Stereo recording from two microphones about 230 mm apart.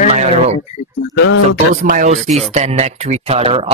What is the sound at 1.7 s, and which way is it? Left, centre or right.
Speech, right.